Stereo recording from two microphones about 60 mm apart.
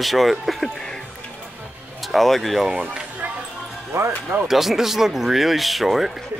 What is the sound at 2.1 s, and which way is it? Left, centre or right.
Speech, centre.